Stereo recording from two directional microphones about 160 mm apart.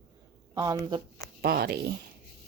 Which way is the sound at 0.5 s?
25° right (ahead or behind).